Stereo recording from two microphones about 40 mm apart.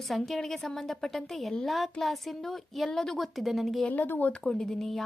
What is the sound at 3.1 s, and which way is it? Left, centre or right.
Speech, centre.